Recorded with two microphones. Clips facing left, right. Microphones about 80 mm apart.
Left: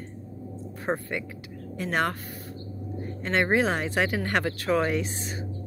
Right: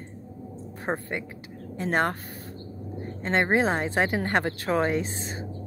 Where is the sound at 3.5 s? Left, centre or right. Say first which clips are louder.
Right 1 dB; right.